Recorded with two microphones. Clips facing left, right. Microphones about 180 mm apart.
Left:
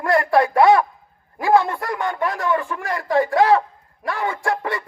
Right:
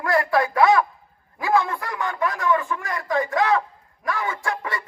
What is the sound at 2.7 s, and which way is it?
Speech, 55° left (ahead or behind).